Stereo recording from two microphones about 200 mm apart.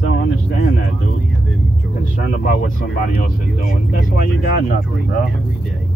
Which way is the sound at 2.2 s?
40° left (ahead or behind).